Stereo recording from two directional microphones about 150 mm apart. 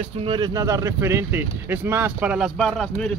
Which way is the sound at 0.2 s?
30° right (ahead or behind).